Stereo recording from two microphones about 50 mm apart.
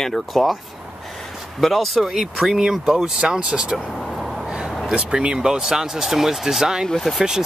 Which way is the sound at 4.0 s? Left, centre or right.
Centre.